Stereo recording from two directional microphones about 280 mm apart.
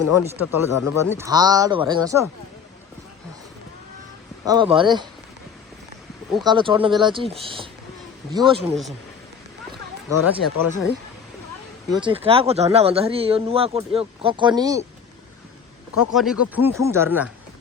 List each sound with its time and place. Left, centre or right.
0.2 s speech: centre
4.4 s speech: centre
6.4 s speech: centre
8.7 s speech: centre
10.2 s speech: centre
11.9 s speech: centre
16.1 s speech: centre